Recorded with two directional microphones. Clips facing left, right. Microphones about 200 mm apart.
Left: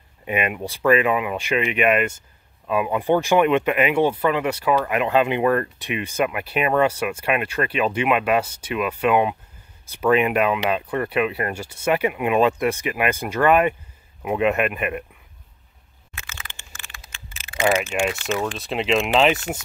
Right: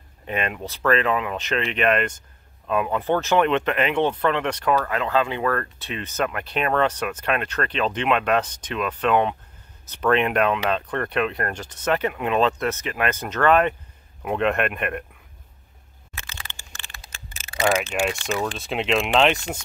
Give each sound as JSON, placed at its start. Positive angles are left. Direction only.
{"t": 0.2, "sound": "speech", "side_deg": 10}
{"t": 16.3, "sound": "a sound", "side_deg": -35}
{"t": 17.6, "sound": "speech", "side_deg": 0}